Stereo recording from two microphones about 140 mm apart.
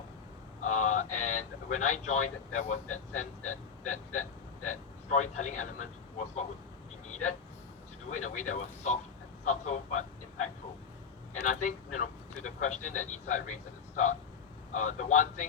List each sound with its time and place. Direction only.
0.6 s speech: 60° left (ahead or behind)
11.4 s speech: 60° left (ahead or behind)